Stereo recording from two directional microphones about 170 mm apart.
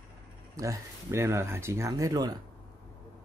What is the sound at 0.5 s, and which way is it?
Speech, 15° right (ahead or behind).